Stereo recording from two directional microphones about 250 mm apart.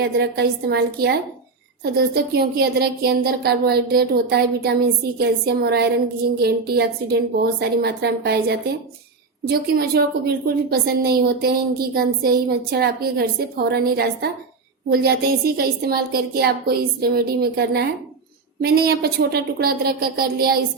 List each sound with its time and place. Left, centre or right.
0.0 s a woman's voice: right